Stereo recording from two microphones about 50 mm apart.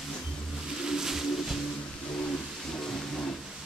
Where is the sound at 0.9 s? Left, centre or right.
Centre.